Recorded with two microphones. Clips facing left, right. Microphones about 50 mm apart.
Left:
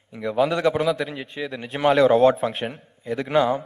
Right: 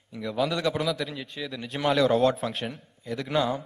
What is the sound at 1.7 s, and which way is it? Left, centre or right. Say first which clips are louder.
A man's voice: left 6 dB; centre.